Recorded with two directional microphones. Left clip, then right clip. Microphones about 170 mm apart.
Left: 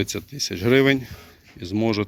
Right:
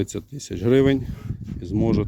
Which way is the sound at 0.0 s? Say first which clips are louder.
Left 3 dB; 25° right (ahead or behind).